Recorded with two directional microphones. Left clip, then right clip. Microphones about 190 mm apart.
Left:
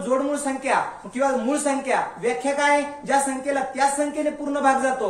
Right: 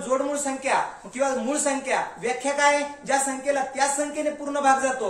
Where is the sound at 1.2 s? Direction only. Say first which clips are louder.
Left 2 dB; 15° right (ahead or behind).